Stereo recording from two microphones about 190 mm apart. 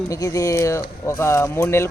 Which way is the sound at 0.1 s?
15° left (ahead or behind).